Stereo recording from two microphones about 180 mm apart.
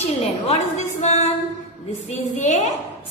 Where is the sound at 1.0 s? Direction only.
35° left (ahead or behind).